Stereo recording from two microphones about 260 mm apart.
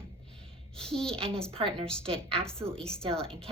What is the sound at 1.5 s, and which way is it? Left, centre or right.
Speech, right.